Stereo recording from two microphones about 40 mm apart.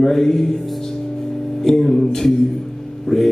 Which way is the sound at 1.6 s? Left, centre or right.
Centre.